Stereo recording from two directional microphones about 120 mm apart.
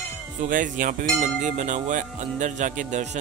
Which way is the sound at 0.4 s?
90° right.